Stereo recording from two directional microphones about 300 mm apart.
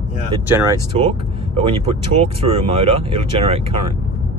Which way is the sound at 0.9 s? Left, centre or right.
Centre.